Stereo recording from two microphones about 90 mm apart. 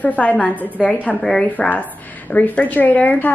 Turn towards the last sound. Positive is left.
turn(degrees=15)  # may be behind; listen again after turning